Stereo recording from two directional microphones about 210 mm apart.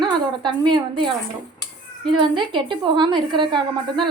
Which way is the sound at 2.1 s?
20° right (ahead or behind).